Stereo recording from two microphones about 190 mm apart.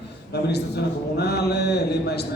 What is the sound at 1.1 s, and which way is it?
Mantra, 60° left (ahead or behind).